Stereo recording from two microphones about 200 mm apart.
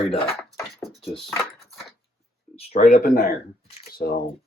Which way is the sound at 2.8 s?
45° left (ahead or behind).